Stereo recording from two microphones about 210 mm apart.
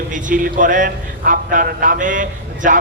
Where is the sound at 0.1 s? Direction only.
40° right (ahead or behind).